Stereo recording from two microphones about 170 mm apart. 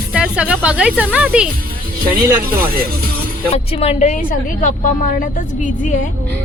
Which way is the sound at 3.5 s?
35° left (ahead or behind).